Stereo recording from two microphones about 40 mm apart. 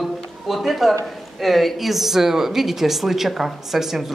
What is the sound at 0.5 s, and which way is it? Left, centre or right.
A woman's voice, centre.